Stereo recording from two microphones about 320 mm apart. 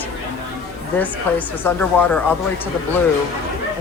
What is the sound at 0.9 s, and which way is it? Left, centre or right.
A man's voice, centre.